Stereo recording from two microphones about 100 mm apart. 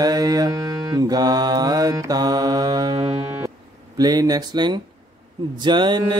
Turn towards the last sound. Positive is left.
turn(degrees=-50)  # may be behind; listen again after turning